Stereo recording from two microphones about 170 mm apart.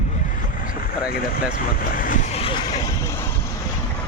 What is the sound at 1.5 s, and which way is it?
Speech, 55° left (ahead or behind).